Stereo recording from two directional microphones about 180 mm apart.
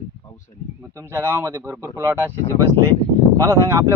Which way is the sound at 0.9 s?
15° right (ahead or behind).